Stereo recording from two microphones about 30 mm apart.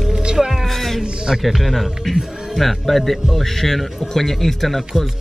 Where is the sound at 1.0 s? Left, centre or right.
Right.